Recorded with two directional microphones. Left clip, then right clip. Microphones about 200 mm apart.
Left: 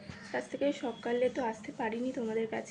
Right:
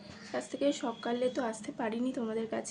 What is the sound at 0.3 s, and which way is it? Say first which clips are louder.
A woman's voice: right 1 dB; 20° right (ahead or behind).